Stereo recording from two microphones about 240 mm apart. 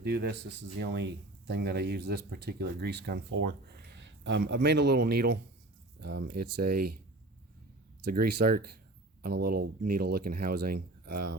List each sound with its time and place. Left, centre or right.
0.0 s a man's voice: right
8.0 s speech: right